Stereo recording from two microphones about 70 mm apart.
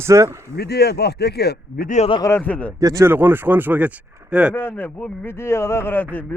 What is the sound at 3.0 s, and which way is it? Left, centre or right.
A man's voice, right.